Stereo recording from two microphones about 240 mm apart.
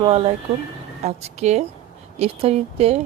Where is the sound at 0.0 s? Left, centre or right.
Right.